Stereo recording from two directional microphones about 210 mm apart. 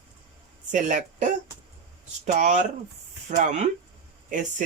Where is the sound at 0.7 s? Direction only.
35° right (ahead or behind).